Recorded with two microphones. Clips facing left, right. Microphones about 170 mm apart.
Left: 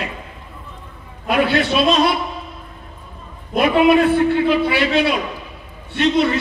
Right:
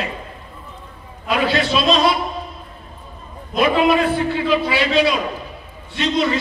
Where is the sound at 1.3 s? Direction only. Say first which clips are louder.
Left 2 dB; 55° left (ahead or behind).